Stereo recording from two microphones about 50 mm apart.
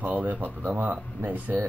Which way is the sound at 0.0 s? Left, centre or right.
Right.